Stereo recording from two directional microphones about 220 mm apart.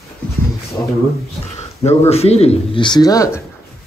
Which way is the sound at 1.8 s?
30° left (ahead or behind).